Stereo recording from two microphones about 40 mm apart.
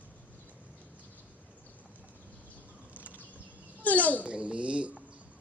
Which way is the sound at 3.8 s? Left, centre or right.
Left.